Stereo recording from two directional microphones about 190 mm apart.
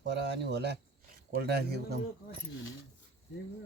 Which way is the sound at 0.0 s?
65° right (ahead or behind).